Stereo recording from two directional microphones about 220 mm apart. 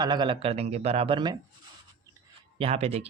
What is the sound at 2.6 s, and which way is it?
Speech, 30° right (ahead or behind).